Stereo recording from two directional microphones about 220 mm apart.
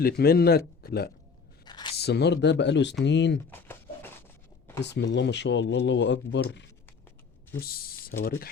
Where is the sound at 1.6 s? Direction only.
20° left (ahead or behind).